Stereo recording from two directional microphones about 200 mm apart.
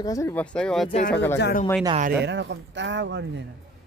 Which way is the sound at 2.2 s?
60° right (ahead or behind).